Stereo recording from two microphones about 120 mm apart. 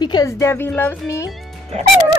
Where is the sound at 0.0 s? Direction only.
35° left (ahead or behind).